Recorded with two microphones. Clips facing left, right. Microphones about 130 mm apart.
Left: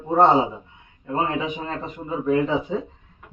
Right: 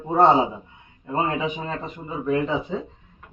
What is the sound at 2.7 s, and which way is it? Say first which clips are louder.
Speech: left 2 dB; 10° left (ahead or behind).